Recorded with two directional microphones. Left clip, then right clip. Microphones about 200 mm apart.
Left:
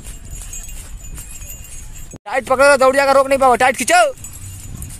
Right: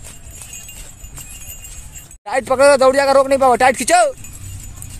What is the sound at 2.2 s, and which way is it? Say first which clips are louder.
Speech: even; centre (ahead or behind).